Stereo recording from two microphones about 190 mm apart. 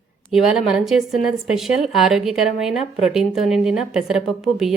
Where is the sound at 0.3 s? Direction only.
Centre (ahead or behind).